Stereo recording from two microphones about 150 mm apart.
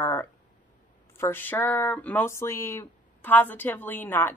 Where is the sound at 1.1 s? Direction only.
15° left (ahead or behind).